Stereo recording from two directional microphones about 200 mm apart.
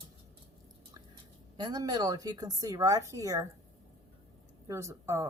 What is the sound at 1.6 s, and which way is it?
A woman's voice, 20° right (ahead or behind).